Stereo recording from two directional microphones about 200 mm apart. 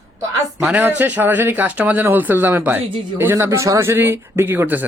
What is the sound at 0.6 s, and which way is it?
Speech, 5° right (ahead or behind).